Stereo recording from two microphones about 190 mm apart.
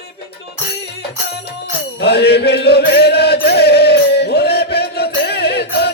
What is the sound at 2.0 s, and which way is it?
Chant, 60° left (ahead or behind).